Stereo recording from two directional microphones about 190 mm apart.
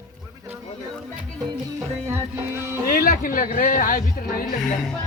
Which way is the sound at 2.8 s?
50° left (ahead or behind).